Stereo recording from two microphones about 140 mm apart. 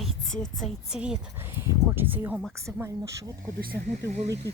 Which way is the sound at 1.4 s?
15° right (ahead or behind).